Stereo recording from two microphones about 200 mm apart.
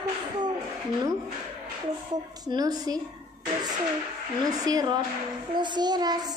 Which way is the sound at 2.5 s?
20° right (ahead or behind).